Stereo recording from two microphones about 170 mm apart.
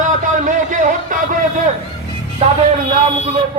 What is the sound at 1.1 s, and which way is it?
Speech, 50° right (ahead or behind).